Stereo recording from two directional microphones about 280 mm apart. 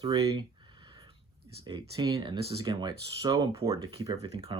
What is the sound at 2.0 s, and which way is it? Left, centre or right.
Speech, centre.